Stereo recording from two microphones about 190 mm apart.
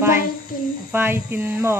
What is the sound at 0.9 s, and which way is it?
Speech, 10° right (ahead or behind).